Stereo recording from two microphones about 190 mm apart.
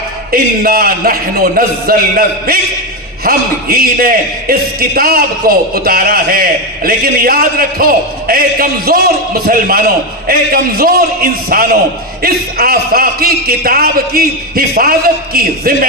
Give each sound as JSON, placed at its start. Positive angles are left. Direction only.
{"t": 0.3, "sound": "a man's voice", "side_deg": -50}